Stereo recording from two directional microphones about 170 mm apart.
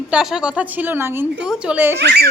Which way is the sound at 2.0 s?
80° right.